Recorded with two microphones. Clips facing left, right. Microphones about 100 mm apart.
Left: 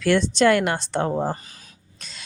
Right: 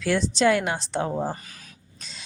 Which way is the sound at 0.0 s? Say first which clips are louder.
Left 3 dB; 60° left (ahead or behind).